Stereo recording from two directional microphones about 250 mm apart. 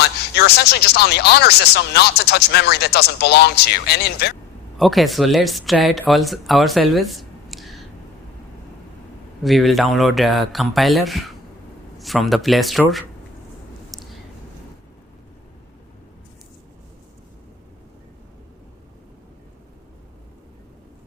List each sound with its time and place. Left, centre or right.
0.0 s speech: left
4.8 s speech: centre
9.4 s speech: centre
13.9 s a sound: centre